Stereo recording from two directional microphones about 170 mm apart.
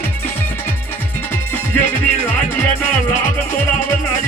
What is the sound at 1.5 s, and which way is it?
Music, 10° left (ahead or behind).